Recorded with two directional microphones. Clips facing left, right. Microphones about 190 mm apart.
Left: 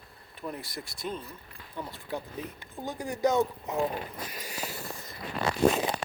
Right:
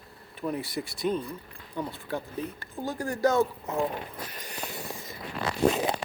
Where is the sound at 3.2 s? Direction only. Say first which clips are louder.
Right 1 dB; 15° left (ahead or behind).